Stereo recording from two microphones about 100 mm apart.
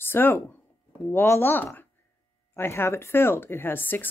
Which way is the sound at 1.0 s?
25° left (ahead or behind).